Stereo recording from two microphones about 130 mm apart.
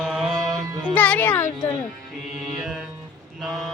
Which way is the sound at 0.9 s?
10° left (ahead or behind).